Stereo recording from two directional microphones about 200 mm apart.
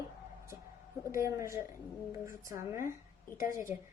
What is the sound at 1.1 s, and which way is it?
A woman's voice, 15° right (ahead or behind).